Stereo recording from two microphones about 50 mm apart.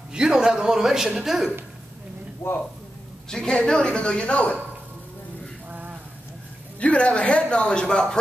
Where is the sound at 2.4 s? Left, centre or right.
Left.